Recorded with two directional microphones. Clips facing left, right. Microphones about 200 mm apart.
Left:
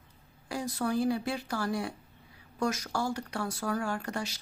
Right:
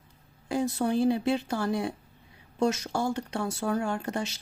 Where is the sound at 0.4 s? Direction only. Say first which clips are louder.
Right 5 dB; 25° right (ahead or behind).